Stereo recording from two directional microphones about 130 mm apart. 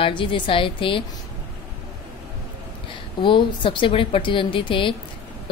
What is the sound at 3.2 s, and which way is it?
A woman's voice, 40° left (ahead or behind).